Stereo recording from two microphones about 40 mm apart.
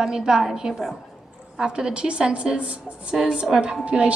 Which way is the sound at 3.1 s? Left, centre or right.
Right.